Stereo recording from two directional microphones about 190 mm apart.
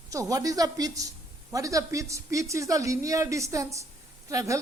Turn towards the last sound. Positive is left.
turn(degrees=-15)  # may be behind; listen again after turning